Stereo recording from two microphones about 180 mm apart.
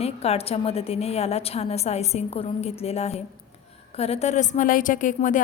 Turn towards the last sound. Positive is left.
turn(degrees=45)  # may be behind; listen again after turning